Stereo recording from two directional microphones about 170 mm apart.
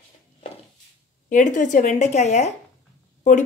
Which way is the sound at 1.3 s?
50° left (ahead or behind).